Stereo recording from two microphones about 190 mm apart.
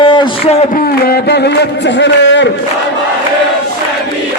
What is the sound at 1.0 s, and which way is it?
Music, 60° left (ahead or behind).